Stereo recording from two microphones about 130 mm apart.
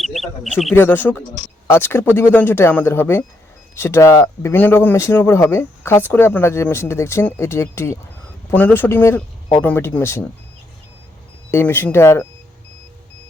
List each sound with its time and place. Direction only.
0.0 s a sound: centre (ahead or behind)
0.7 s speech: 15° left (ahead or behind)
11.5 s speech: 15° left (ahead or behind)